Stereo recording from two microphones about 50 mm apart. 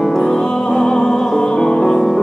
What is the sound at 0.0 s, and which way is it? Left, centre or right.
Music, centre.